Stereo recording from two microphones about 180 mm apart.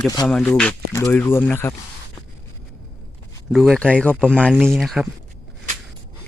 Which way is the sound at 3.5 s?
Centre (ahead or behind).